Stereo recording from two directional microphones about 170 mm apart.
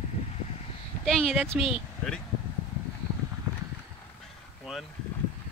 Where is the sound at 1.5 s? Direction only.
30° left (ahead or behind).